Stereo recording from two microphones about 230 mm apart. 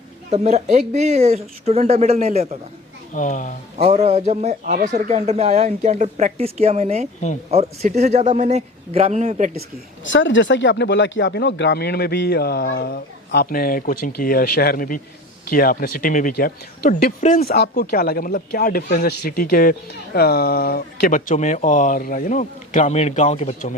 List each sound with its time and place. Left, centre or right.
0.3 s speech: right
3.1 s speech: left
3.8 s speech: right
10.1 s speech: left